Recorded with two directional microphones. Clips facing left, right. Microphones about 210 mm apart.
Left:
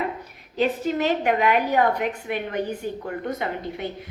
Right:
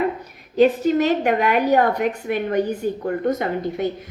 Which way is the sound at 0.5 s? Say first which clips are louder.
Right 7 dB; 45° right (ahead or behind).